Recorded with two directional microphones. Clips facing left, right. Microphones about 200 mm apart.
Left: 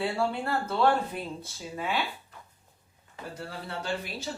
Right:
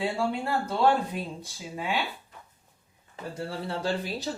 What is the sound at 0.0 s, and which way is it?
Speech, 15° right (ahead or behind).